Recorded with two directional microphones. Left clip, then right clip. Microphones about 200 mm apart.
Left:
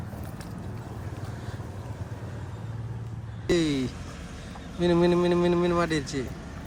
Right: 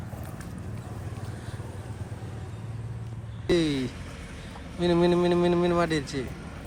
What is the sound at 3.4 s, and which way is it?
Speech, 10° left (ahead or behind).